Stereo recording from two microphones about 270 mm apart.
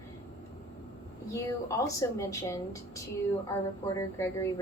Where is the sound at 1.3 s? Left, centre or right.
Centre.